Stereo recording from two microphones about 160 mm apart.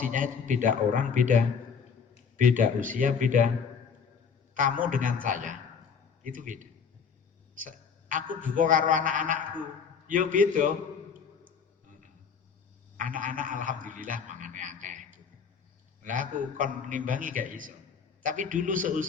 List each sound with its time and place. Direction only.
0.0 s a man's voice: 55° right (ahead or behind)
4.5 s a man's voice: 55° right (ahead or behind)
13.0 s a man's voice: 55° right (ahead or behind)